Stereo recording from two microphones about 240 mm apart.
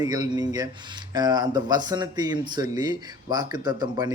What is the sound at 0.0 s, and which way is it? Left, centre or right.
Speech, centre.